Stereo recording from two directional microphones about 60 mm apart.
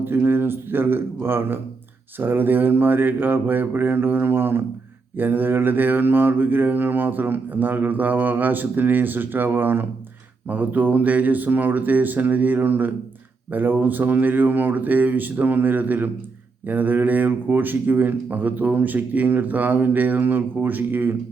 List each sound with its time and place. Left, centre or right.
0.0 s mantra: right
10.5 s speech: right
13.5 s mantra: right